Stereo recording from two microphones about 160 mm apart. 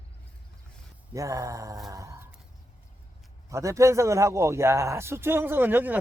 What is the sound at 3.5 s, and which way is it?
A man's voice, 20° right (ahead or behind).